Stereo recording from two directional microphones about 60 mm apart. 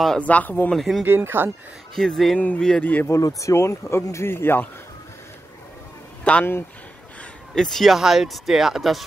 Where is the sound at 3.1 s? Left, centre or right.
Left.